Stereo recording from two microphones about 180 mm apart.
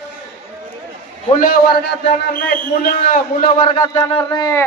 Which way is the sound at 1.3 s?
50° left (ahead or behind).